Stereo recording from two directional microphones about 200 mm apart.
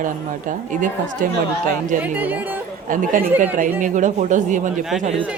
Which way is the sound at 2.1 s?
10° right (ahead or behind).